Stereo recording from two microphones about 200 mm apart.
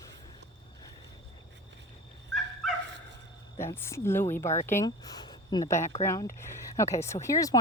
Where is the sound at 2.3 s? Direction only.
Centre (ahead or behind).